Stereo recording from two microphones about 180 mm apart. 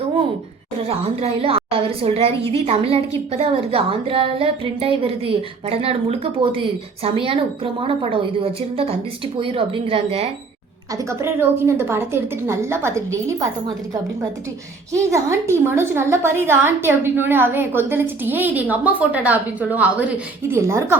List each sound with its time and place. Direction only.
0.9 s a woman's voice: 35° right (ahead or behind)
10.9 s a woman's voice: 15° right (ahead or behind)
15.1 s a woman's voice: 15° right (ahead or behind)